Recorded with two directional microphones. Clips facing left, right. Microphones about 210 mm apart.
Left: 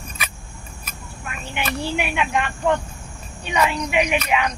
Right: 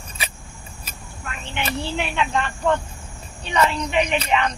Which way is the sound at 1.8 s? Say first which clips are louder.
Left 1 dB; 10° left (ahead or behind).